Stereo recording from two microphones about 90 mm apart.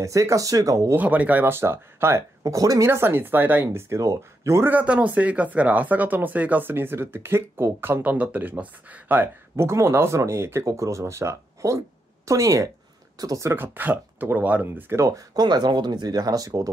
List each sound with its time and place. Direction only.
0.0 s speech: 35° right (ahead or behind)
0.9 s speech: 15° right (ahead or behind); by 2.9 s 40° right (ahead or behind)
2.9 s speech: 25° right (ahead or behind)
4.6 s speech: 15° right (ahead or behind)
15.0 s speech: 40° right (ahead or behind)
15.4 s speech: 55° right (ahead or behind)